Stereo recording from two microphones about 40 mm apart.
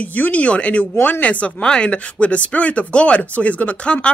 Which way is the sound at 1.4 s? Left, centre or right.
Left.